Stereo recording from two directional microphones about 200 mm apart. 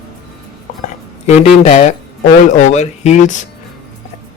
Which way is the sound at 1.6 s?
35° left (ahead or behind).